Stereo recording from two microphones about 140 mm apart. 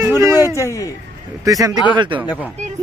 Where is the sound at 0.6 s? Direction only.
20° left (ahead or behind).